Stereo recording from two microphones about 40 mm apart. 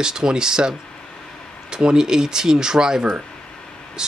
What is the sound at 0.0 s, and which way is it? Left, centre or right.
Speech, centre.